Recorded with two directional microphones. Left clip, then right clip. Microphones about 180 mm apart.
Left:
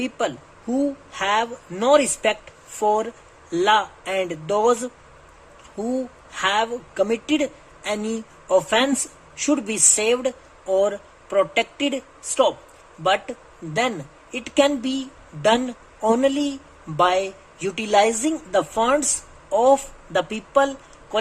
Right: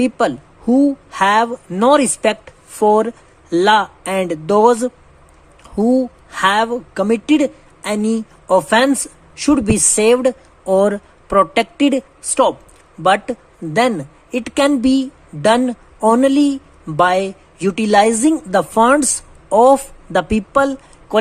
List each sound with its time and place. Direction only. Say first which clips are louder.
0.0 s a woman's voice: right 9 dB; 25° right (ahead or behind)